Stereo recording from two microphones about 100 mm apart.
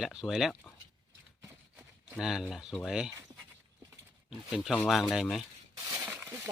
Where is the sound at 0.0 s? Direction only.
5° right (ahead or behind).